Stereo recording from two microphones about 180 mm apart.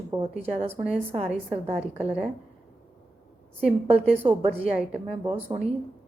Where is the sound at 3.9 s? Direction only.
35° right (ahead or behind).